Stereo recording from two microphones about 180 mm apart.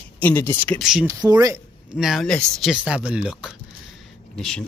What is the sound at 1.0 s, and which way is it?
Speech, 20° right (ahead or behind).